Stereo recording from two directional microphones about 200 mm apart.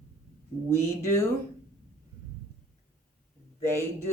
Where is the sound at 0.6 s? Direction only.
10° left (ahead or behind).